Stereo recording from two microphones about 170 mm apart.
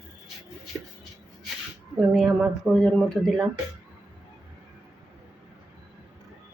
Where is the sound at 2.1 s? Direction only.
5° right (ahead or behind).